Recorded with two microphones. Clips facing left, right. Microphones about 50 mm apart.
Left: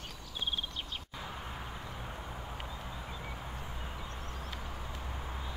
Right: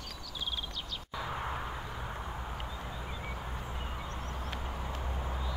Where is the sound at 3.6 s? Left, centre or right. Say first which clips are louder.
Right 3 dB; right.